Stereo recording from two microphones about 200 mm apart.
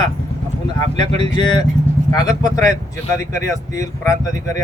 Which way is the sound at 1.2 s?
20° left (ahead or behind).